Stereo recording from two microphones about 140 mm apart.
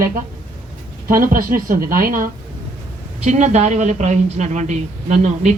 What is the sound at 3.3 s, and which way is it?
A woman's voice, 55° right (ahead or behind).